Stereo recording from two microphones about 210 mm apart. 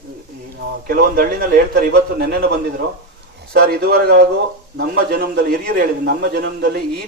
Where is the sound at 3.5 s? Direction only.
50° right (ahead or behind).